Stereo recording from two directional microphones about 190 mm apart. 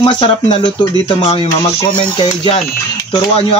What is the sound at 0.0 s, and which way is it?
Speech, 25° left (ahead or behind).